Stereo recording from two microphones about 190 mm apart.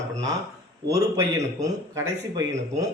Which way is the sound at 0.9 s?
15° right (ahead or behind).